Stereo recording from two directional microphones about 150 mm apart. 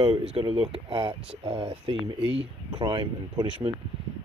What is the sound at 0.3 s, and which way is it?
Speech, 35° right (ahead or behind).